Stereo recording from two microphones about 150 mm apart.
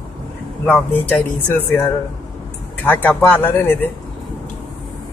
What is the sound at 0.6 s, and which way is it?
Speech, 10° left (ahead or behind).